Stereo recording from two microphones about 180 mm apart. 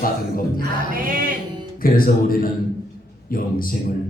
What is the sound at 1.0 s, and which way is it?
Music, 50° right (ahead or behind).